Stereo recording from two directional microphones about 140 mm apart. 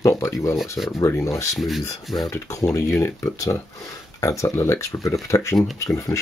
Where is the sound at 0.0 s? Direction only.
20° left (ahead or behind).